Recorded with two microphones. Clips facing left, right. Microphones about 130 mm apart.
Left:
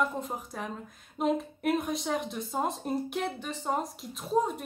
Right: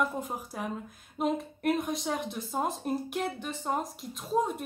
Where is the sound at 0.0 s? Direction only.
5° right (ahead or behind).